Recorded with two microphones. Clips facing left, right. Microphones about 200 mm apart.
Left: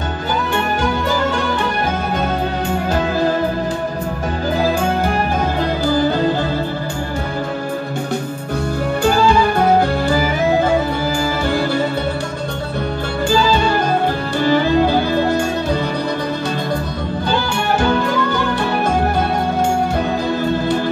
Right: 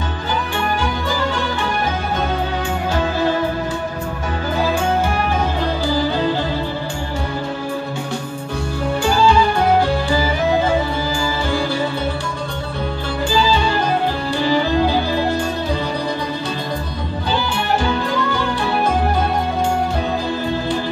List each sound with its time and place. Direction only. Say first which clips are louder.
6.0 s music: left 3 dB; 50° left (ahead or behind)
14.4 s music: left 3 dB; 55° left (ahead or behind)